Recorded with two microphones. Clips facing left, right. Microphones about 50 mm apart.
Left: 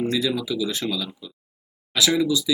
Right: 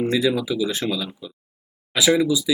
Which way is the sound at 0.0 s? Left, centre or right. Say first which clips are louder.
Right 3 dB; centre.